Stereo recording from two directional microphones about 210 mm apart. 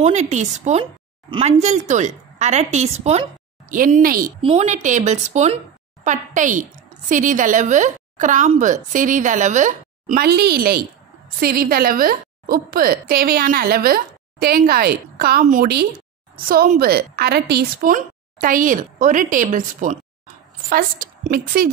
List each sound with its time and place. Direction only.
0.0 s speech: 35° right (ahead or behind)
4.4 s a woman's voice: 30° right (ahead or behind)